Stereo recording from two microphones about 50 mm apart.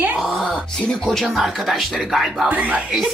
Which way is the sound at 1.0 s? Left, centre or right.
Centre.